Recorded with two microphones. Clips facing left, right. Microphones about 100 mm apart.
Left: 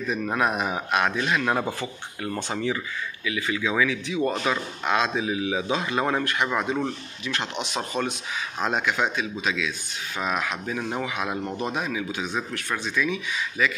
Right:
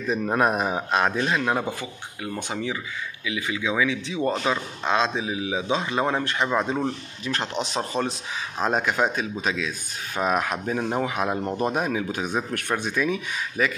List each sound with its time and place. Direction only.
0.1 s speech: 30° right (ahead or behind)
1.7 s speech: 15° right (ahead or behind); by 10.8 s 45° right (ahead or behind)
10.8 s speech: 35° right (ahead or behind)